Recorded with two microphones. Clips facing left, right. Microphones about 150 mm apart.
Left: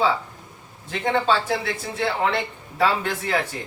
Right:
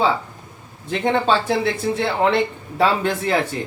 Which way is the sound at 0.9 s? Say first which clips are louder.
Right 3 dB; 25° right (ahead or behind).